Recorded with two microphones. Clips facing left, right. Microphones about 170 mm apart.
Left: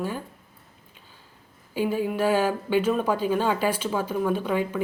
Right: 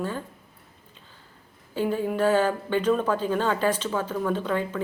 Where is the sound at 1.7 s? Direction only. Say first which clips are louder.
Even; 10° left (ahead or behind).